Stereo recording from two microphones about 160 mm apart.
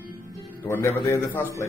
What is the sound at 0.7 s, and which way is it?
Speech, 15° left (ahead or behind).